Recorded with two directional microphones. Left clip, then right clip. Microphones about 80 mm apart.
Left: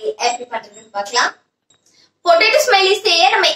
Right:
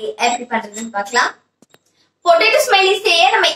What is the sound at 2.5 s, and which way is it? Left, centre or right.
Speech, left.